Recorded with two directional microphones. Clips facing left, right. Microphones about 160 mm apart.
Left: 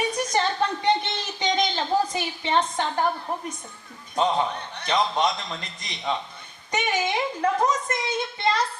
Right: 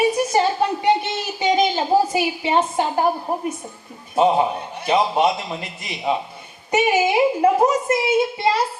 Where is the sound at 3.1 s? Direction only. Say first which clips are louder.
Right 6 dB; 35° right (ahead or behind).